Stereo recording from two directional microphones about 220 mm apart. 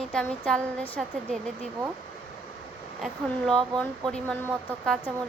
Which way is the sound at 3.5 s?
5° left (ahead or behind).